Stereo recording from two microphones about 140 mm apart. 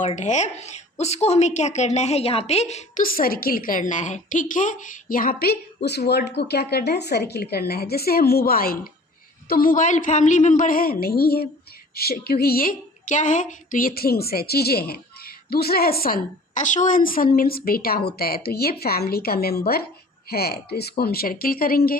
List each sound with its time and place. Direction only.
0.0 s a woman's voice: 55° left (ahead or behind)
3.0 s a woman's voice: 90° left
7.1 s a woman's voice: 90° left